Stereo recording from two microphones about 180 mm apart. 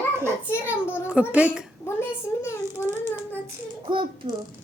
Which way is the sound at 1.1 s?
5° right (ahead or behind).